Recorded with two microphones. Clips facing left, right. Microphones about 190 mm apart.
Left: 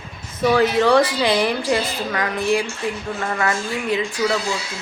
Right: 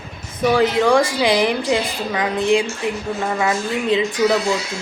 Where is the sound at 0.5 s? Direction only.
15° right (ahead or behind).